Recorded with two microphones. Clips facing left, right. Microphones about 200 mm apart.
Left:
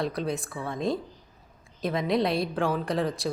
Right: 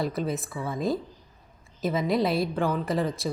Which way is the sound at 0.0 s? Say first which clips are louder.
Right 1 dB; centre (ahead or behind).